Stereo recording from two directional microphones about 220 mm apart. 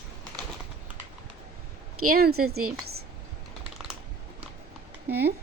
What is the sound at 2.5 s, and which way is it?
Speech, 80° right.